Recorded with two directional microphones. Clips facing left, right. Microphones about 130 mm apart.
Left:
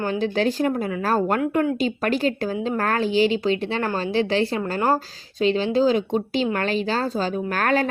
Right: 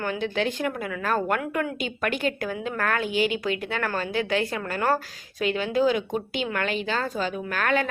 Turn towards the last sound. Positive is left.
turn(degrees=35)  # may be behind; listen again after turning